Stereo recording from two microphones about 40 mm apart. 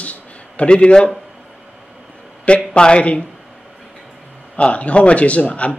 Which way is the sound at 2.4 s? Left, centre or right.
Left.